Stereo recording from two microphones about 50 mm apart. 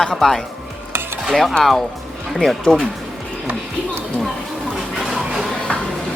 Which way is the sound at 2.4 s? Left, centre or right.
Centre.